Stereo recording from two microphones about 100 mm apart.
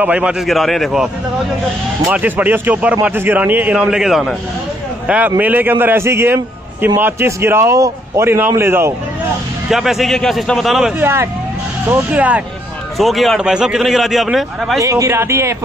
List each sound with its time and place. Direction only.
0.0 s a man's voice: 15° right (ahead or behind)
0.5 s a man's voice: centre (ahead or behind)
2.0 s a man's voice: 15° right (ahead or behind)
9.7 s a man's voice: 5° right (ahead or behind)
11.0 s a man's voice: 25° right (ahead or behind)
12.9 s a man's voice: centre (ahead or behind)
14.8 s a man's voice: 30° right (ahead or behind)